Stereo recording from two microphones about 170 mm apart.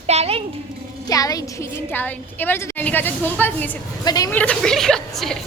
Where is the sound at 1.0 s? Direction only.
20° left (ahead or behind).